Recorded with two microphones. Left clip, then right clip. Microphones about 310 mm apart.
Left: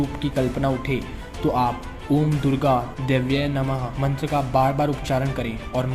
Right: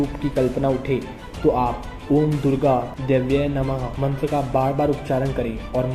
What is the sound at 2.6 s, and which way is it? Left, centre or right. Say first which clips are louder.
Speech: even; left.